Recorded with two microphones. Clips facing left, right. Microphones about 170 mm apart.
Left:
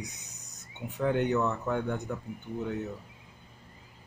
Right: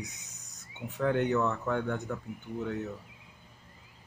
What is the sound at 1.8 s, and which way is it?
Speech, 15° left (ahead or behind).